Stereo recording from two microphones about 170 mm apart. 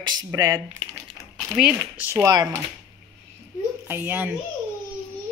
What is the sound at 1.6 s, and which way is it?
Speech, 10° right (ahead or behind).